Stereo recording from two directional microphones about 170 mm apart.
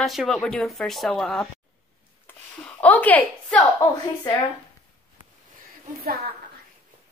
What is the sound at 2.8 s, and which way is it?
Speech, 10° left (ahead or behind).